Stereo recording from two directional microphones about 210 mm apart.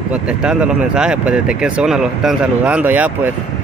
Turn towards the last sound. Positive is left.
turn(degrees=-10)  # may be behind; listen again after turning